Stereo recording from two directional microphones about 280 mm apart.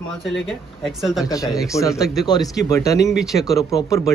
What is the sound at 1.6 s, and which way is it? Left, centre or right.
Speech, centre.